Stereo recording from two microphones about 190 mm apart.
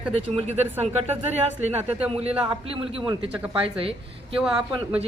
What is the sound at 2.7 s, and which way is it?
Speech, 30° right (ahead or behind).